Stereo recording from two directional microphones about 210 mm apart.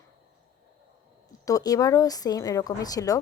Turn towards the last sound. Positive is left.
turn(degrees=15)  # may be behind; listen again after turning